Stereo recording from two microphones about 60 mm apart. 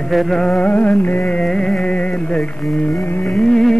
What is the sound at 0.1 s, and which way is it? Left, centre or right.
Music, centre.